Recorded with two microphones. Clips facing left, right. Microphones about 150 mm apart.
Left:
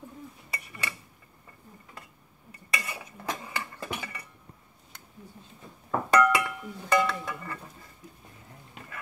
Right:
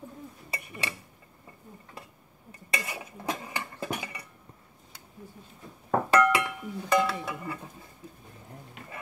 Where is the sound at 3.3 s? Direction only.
15° right (ahead or behind).